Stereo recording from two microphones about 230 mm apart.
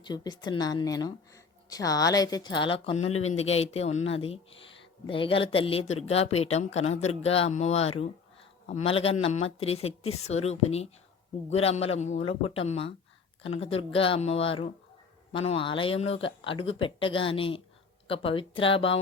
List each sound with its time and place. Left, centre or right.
0.0 s a woman's voice: centre
3.0 s speech: left
3.3 s a woman's voice: left